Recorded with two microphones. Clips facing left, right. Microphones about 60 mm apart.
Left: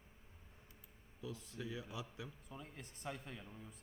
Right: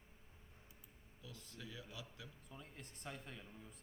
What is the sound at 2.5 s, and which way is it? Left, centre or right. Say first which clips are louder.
Speech: left 3 dB; centre.